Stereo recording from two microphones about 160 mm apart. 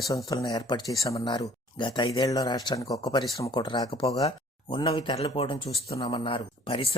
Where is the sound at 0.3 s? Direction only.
25° left (ahead or behind).